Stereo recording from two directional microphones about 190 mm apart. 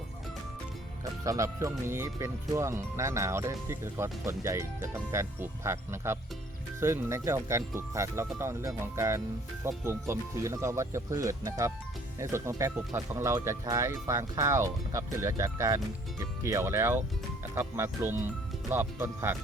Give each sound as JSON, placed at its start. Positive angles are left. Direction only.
{"t": 1.2, "sound": "speech", "side_deg": -15}